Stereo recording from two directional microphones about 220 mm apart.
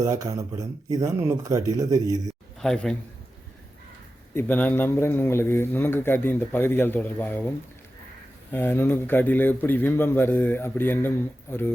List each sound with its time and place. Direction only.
0.0 s speech: 15° right (ahead or behind)
2.6 s a man's voice: 5° left (ahead or behind)
4.4 s a man's voice: 10° left (ahead or behind)
8.5 s a man's voice: 10° left (ahead or behind)